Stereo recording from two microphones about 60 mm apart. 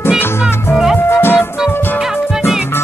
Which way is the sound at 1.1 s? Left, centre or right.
Left.